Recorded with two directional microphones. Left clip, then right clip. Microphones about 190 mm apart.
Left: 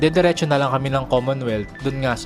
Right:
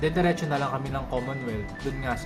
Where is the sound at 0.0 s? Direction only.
50° left (ahead or behind).